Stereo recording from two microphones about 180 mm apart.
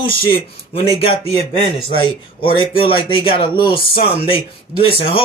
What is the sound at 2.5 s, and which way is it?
A man's voice, 30° left (ahead or behind).